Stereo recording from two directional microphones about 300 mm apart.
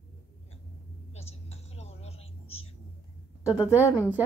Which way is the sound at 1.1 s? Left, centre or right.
Left.